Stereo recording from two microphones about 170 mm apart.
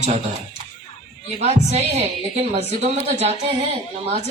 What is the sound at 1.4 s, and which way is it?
A woman's voice, 40° right (ahead or behind).